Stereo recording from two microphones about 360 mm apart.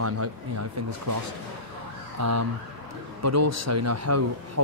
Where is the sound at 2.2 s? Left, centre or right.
Right.